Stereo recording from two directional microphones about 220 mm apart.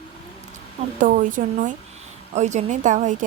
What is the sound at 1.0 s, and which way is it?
Speech, 35° right (ahead or behind).